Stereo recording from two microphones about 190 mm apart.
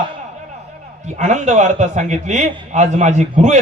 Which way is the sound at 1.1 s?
40° right (ahead or behind).